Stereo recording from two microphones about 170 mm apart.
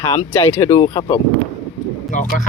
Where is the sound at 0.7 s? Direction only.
30° left (ahead or behind).